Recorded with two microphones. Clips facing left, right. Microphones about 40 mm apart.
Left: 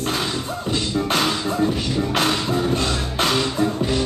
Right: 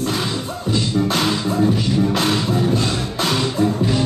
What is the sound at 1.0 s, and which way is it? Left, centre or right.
Music, centre.